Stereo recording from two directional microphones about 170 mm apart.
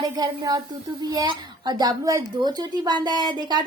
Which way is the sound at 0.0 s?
20° right (ahead or behind).